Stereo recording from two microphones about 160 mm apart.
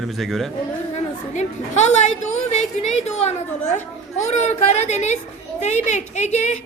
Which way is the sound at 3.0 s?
45° left (ahead or behind).